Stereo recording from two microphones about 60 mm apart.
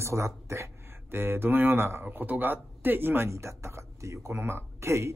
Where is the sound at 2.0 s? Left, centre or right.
Right.